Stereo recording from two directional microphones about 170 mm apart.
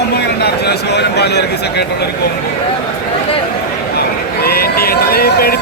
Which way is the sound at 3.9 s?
65° left (ahead or behind).